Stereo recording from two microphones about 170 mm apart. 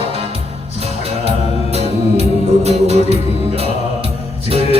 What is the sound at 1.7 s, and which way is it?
Music, 40° right (ahead or behind).